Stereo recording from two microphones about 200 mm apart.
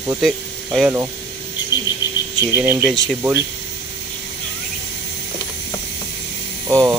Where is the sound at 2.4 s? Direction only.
10° right (ahead or behind).